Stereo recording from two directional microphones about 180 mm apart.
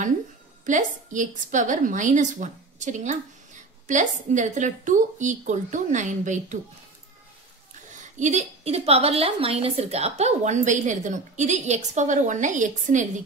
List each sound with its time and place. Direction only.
0.7 s a woman's voice: 45° right (ahead or behind)
8.2 s a woman's voice: 40° right (ahead or behind)